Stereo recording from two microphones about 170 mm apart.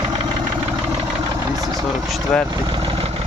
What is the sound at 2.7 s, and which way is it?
Vehicle, 30° right (ahead or behind).